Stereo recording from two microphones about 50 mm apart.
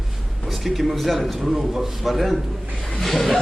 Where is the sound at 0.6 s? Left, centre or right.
Centre.